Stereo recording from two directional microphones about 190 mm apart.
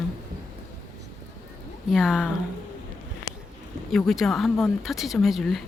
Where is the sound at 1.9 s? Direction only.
Centre (ahead or behind).